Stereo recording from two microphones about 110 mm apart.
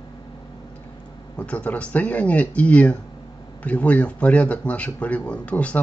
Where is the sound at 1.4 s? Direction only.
10° left (ahead or behind).